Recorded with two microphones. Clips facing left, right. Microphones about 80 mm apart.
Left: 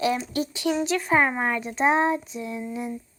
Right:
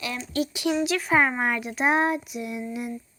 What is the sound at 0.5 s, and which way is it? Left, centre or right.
Child singing, centre.